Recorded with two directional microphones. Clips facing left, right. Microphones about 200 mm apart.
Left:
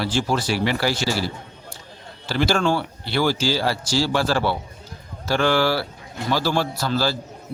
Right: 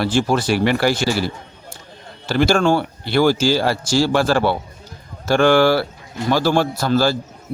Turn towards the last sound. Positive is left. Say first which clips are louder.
# right 6 dB
turn(degrees=-50)  # may be behind; listen again after turning